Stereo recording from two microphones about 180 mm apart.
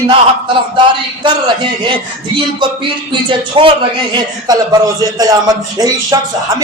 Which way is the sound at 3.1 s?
25° right (ahead or behind).